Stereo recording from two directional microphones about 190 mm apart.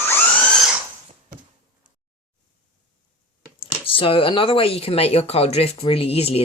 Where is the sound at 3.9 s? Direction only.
30° left (ahead or behind).